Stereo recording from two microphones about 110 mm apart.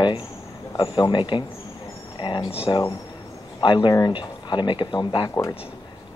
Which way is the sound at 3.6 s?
45° left (ahead or behind).